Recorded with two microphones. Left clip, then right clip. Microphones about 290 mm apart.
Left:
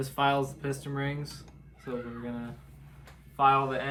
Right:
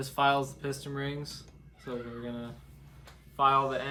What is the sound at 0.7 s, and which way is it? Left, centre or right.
Speech, centre.